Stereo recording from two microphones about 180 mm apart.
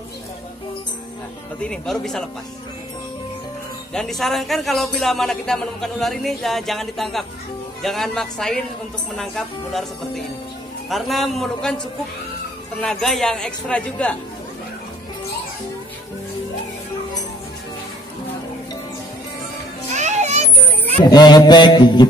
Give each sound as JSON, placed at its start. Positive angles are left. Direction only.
{"t": 1.6, "sound": "a man's voice", "side_deg": 5}
{"t": 3.9, "sound": "a man's voice", "side_deg": 0}
{"t": 12.8, "sound": "a man's voice", "side_deg": 0}
{"t": 20.0, "sound": "children playing", "side_deg": -40}
{"t": 21.0, "sound": "mantra", "side_deg": 20}